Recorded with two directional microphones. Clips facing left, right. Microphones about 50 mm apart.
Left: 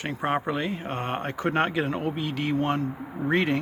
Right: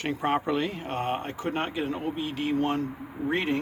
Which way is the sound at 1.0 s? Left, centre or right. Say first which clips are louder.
Left 1 dB; left.